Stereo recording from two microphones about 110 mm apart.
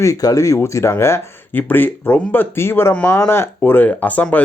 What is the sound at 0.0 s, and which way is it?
Speech, 30° left (ahead or behind).